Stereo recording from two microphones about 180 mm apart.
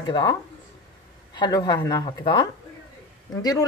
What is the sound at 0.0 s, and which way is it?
Speech, 25° left (ahead or behind).